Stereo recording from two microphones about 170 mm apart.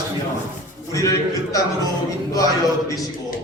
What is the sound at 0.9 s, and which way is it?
Speech, 20° left (ahead or behind).